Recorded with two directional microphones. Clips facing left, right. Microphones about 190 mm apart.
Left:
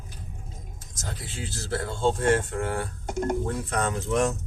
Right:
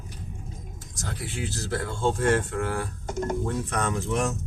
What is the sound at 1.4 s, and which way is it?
Speech, 25° left (ahead or behind).